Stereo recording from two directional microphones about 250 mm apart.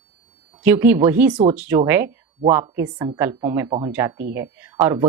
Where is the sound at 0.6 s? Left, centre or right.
Centre.